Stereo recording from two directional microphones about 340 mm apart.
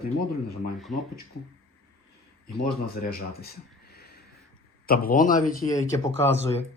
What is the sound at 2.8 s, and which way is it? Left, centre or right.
Speech, left.